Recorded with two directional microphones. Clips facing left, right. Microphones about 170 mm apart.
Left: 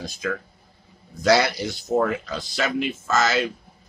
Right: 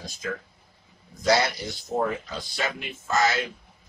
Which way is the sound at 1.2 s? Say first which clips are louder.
Left 4 dB; 75° left (ahead or behind).